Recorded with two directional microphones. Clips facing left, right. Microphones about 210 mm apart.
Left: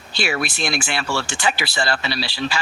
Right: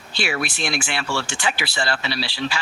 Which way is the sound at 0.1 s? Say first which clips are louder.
Left 2 dB; 40° left (ahead or behind).